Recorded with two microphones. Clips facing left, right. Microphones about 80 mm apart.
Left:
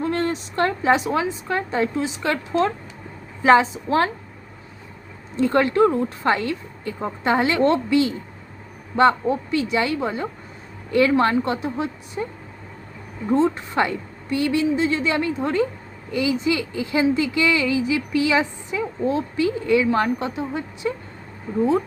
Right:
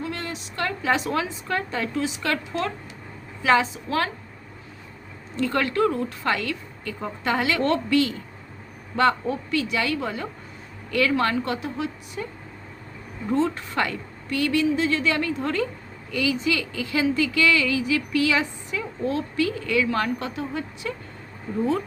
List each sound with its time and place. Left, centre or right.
0.0 s a sound: left
0.9 s speech: left
5.4 s speech: left